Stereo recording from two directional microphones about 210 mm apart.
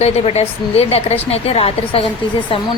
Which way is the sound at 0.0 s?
30° left (ahead or behind).